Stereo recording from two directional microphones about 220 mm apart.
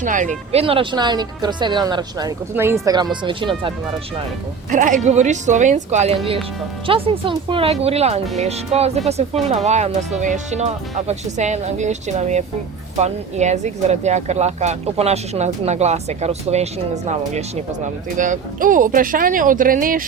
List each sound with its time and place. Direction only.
0.0 s speech: 35° right (ahead or behind)
0.5 s speech: 25° right (ahead or behind)
4.7 s speech: 35° right (ahead or behind)